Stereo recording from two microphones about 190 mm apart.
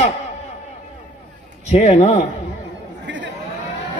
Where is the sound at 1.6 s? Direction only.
35° left (ahead or behind).